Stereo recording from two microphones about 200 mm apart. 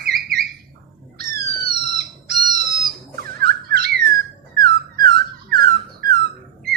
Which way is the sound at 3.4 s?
50° right (ahead or behind).